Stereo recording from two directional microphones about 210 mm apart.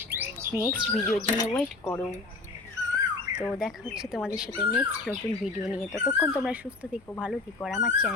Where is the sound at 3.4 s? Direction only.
Centre (ahead or behind).